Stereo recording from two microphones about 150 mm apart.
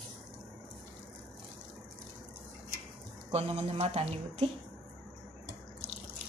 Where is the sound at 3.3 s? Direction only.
45° right (ahead or behind).